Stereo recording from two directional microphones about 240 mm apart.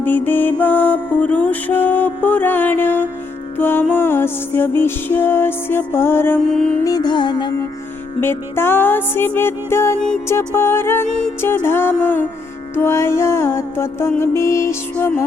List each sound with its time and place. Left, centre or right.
0.0 s music: centre
6.8 s music: centre